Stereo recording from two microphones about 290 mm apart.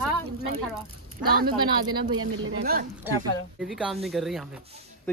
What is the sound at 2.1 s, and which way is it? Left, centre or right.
Speech, right.